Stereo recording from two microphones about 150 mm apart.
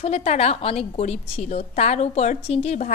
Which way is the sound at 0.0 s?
45° left (ahead or behind).